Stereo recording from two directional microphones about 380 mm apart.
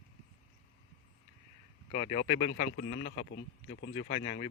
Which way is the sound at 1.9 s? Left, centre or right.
Left.